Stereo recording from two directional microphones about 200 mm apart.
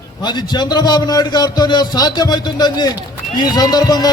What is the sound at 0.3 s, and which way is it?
A man's voice, 20° left (ahead or behind).